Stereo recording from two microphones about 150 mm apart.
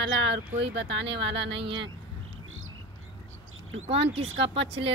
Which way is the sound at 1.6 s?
35° right (ahead or behind).